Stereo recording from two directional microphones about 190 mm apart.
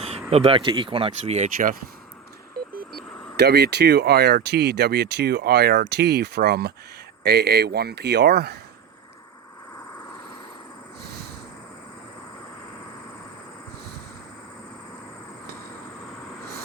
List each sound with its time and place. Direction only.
0.0 s speech: 35° right (ahead or behind)
1.5 s speech: 50° right (ahead or behind)
3.3 s speech: 55° right (ahead or behind)
11.0 s a sound: 55° right (ahead or behind)